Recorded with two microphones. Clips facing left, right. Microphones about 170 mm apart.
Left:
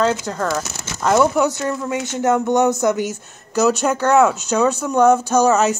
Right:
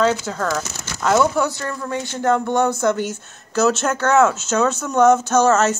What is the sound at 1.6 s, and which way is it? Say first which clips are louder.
Speech: left 3 dB; 20° left (ahead or behind).